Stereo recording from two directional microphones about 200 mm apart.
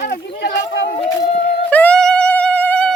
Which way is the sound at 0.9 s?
25° left (ahead or behind).